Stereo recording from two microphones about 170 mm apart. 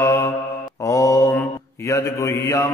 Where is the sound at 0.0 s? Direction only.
20° left (ahead or behind).